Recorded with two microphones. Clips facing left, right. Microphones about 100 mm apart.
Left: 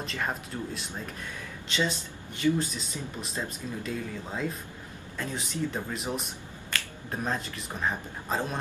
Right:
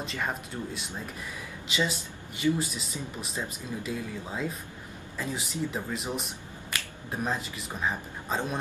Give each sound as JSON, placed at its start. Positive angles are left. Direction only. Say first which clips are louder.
{"t": 0.0, "sound": "speech", "louder": "even", "side_deg": 0}
{"t": 6.7, "sound": "finger snapping", "louder": "left 1 dB", "side_deg": -15}
{"t": 7.1, "sound": "speech", "louder": "even", "side_deg": 0}